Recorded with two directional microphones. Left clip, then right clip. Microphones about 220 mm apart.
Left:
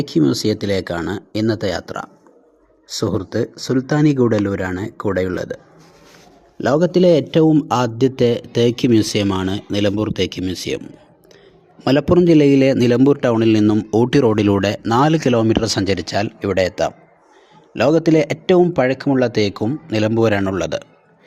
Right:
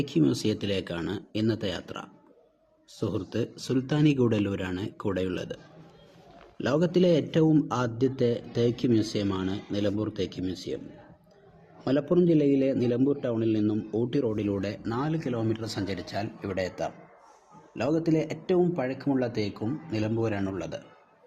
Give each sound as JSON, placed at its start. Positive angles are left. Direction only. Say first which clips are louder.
{"t": 0.2, "sound": "speech", "louder": "left 10 dB", "side_deg": 30}
{"t": 6.6, "sound": "a man's voice", "louder": "left 10 dB", "side_deg": 30}
{"t": 11.9, "sound": "a man's voice", "louder": "left 11 dB", "side_deg": 45}